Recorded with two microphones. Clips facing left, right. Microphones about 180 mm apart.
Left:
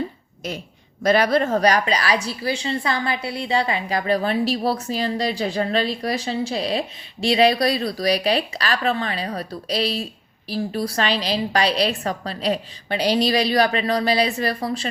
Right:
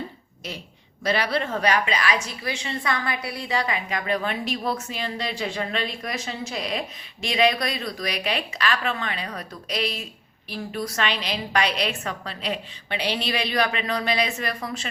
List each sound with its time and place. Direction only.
1.0 s a woman's voice: 45° left (ahead or behind)